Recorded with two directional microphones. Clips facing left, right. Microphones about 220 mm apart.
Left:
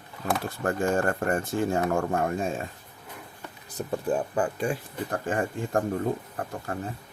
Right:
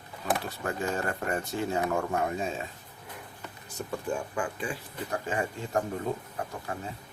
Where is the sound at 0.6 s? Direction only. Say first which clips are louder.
Left 6 dB; 50° left (ahead or behind).